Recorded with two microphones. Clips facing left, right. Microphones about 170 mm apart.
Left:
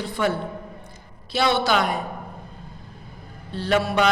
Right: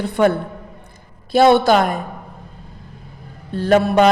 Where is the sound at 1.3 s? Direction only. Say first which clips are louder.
Right 9 dB; 50° right (ahead or behind).